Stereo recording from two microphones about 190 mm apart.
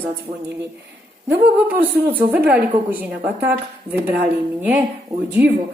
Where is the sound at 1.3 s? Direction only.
10° right (ahead or behind).